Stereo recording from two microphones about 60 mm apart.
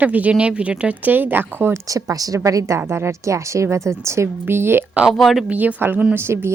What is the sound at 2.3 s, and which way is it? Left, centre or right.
Speech, right.